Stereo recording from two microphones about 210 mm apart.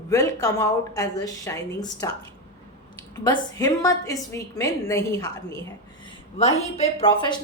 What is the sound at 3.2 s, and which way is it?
A woman's voice, 15° left (ahead or behind).